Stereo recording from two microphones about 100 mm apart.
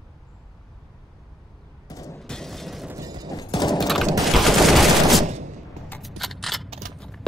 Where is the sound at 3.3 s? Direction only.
40° left (ahead or behind).